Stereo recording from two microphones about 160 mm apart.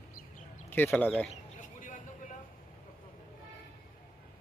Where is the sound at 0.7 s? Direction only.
10° left (ahead or behind).